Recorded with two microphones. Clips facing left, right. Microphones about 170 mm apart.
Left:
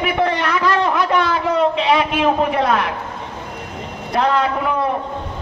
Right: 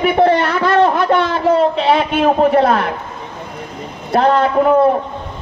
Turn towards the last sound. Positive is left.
turn(degrees=-40)  # may be behind; listen again after turning